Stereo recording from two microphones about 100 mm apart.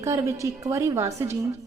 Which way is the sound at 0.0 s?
30° right (ahead or behind).